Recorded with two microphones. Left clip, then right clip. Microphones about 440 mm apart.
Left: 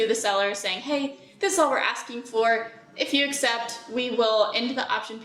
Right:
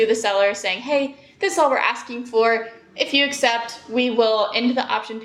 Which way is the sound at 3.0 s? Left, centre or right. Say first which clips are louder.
Right 5 dB; right.